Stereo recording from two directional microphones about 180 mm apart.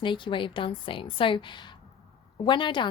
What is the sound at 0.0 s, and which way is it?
A woman's voice, 25° left (ahead or behind).